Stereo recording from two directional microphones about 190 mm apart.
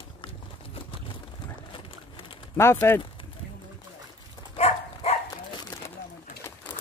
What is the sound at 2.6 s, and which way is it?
Speech, 10° left (ahead or behind).